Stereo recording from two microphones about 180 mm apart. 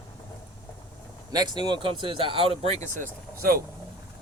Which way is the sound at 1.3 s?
25° right (ahead or behind).